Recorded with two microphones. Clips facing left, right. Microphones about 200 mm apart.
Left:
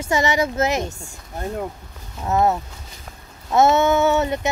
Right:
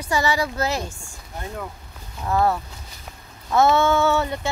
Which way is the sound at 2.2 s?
20° left (ahead or behind).